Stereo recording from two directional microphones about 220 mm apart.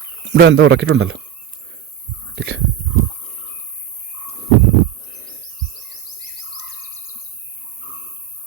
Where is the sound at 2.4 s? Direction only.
50° right (ahead or behind).